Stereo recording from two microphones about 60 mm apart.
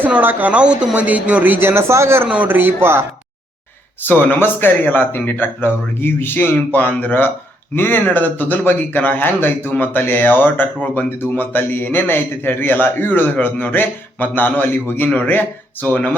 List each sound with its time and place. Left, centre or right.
0.1 s a man's voice: right
2.3 s a man's voice: right
4.0 s a man's voice: left